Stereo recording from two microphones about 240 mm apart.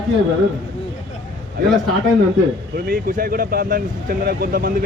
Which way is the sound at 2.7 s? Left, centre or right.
Right.